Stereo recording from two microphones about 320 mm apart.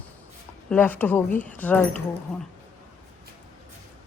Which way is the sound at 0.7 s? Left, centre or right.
Centre.